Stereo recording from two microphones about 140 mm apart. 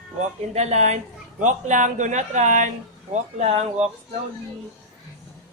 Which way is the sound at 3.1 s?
50° right (ahead or behind).